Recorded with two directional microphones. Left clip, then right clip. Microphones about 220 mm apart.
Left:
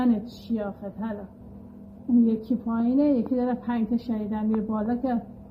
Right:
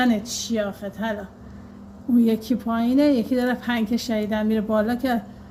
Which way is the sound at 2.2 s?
20° right (ahead or behind).